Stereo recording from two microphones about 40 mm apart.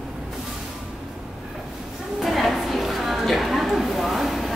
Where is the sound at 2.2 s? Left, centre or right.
Centre.